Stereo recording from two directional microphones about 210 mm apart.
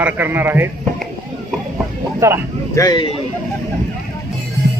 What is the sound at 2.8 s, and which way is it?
Speech, 20° left (ahead or behind).